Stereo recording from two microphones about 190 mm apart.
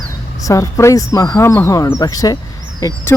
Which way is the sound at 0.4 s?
15° left (ahead or behind).